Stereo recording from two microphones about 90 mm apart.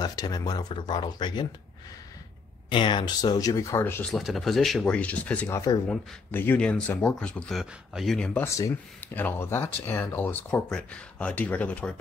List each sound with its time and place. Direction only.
0.0 s speech: 45° left (ahead or behind)
2.7 s speech: 65° left (ahead or behind); by 3.8 s 40° left (ahead or behind)
4.1 s speech: centre (ahead or behind)
4.8 s speech: 15° left (ahead or behind)
5.5 s speech: 35° left (ahead or behind)
6.3 s speech: 25° left (ahead or behind)
7.5 s speech: centre (ahead or behind)
8.5 s speech: 35° left (ahead or behind)
9.0 s speech: 20° left (ahead or behind)